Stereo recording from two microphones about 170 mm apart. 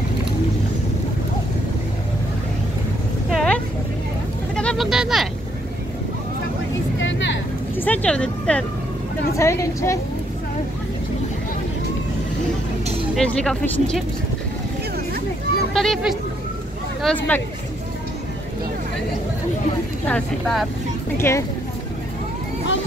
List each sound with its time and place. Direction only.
3.3 s a sound: 5° left (ahead or behind)
7.0 s vehicle: 90° left
7.7 s speech: 10° left (ahead or behind)
9.4 s a woman's voice: 15° left (ahead or behind)
13.1 s speech: 5° left (ahead or behind)
15.7 s a woman's voice: centre (ahead or behind)
20.1 s speech: 5° left (ahead or behind)
21.2 s a woman's voice: 15° left (ahead or behind)